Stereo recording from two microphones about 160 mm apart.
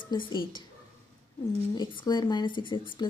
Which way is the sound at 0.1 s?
25° left (ahead or behind).